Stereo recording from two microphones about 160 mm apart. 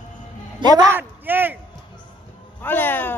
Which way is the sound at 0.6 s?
25° right (ahead or behind).